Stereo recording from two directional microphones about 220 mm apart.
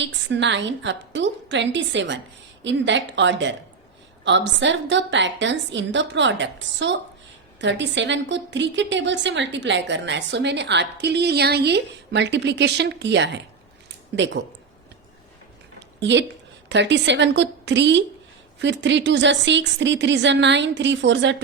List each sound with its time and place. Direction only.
0.0 s a woman's voice: 55° right (ahead or behind)
16.0 s a woman's voice: 55° right (ahead or behind)